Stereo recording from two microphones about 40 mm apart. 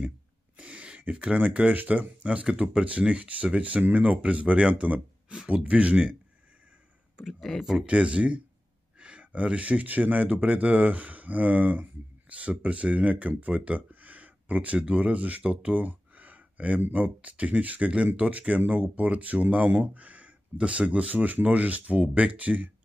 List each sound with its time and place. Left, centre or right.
0.6 s a sound: right
1.5 s speech: right
1.8 s speech: right
2.2 s speech: right
7.5 s speech: centre
7.8 s speech: right